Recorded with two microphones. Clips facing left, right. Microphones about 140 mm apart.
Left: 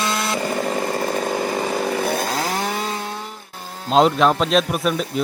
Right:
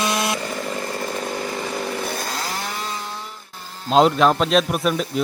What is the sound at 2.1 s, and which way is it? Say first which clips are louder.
Chainsaw: left 5 dB; 55° left (ahead or behind).